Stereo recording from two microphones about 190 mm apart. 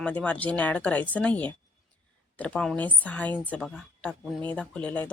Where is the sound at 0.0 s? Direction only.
5° left (ahead or behind).